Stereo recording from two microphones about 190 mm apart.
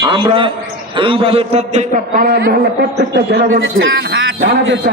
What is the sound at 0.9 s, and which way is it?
A man's voice, 25° right (ahead or behind).